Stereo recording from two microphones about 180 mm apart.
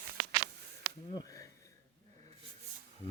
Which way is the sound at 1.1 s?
20° left (ahead or behind).